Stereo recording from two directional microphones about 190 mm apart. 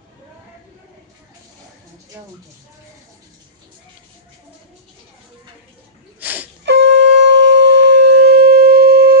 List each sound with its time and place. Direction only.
6.1 s wheeze: 10° right (ahead or behind)
6.6 s shofar: 70° right (ahead or behind)